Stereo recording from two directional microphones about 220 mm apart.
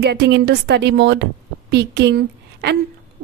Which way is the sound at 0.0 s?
50° right (ahead or behind).